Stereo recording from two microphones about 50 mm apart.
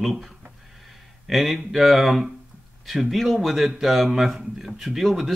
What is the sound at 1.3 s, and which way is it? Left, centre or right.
Speech, centre.